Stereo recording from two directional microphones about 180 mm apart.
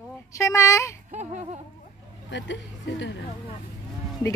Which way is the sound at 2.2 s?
85° left.